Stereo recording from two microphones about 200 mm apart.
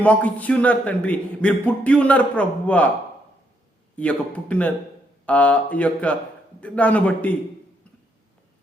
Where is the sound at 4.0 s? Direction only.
5° left (ahead or behind).